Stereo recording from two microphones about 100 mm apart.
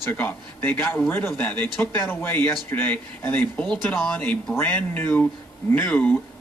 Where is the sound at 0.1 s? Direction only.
20° left (ahead or behind).